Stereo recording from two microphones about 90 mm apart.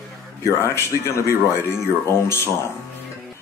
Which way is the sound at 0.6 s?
30° left (ahead or behind).